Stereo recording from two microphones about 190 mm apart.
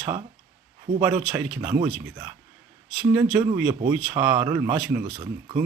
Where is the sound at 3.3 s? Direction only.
20° right (ahead or behind).